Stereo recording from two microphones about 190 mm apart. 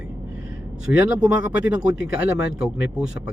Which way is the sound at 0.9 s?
5° right (ahead or behind).